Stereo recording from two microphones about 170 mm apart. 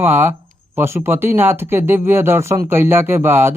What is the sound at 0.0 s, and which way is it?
Speech, 15° right (ahead or behind).